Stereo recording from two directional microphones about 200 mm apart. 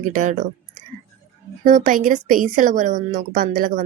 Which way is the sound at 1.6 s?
40° right (ahead or behind).